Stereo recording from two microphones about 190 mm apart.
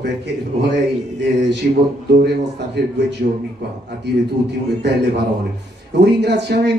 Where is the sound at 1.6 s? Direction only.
50° right (ahead or behind).